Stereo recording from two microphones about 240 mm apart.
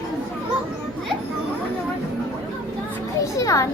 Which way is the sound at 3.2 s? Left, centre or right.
Centre.